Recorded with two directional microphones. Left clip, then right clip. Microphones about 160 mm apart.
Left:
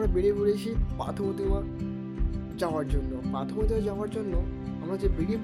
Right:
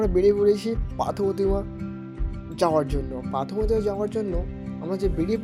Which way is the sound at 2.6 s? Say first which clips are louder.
Right 8 dB; 40° right (ahead or behind).